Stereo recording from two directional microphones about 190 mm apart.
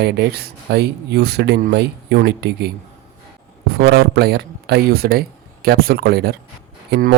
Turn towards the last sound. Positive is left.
turn(degrees=-50)  # may be behind; listen again after turning